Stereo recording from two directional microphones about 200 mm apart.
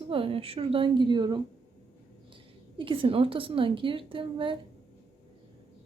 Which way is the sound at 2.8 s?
25° right (ahead or behind).